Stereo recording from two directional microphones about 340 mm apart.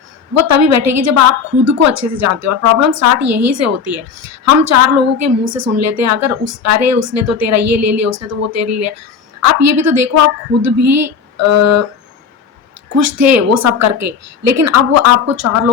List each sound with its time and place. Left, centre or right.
0.3 s a woman's voice: right
13.0 s a woman's voice: right